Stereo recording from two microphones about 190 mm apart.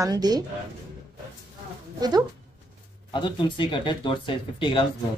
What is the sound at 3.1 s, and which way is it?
Speech, 25° left (ahead or behind).